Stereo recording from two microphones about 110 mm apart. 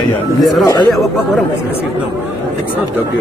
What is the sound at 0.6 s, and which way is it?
Speech, 35° left (ahead or behind).